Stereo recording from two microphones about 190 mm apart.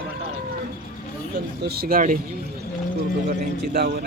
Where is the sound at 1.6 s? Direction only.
55° right (ahead or behind).